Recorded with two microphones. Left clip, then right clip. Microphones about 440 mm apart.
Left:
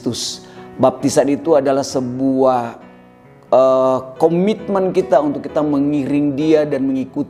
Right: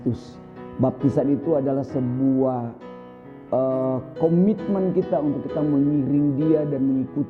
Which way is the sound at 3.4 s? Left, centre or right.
Centre.